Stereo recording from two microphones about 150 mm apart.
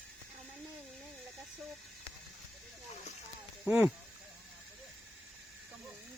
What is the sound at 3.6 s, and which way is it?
Speech, 10° right (ahead or behind).